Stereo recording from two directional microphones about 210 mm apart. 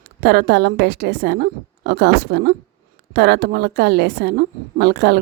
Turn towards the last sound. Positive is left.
turn(degrees=-50)  # may be behind; listen again after turning